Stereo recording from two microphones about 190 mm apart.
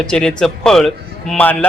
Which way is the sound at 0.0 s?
5° left (ahead or behind).